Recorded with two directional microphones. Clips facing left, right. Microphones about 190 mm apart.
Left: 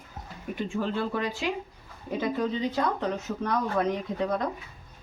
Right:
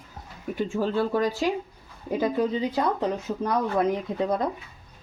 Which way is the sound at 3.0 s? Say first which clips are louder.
Right 3 dB; 30° right (ahead or behind).